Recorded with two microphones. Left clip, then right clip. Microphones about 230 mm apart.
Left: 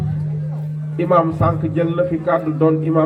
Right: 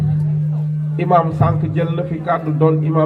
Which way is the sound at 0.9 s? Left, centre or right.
Right.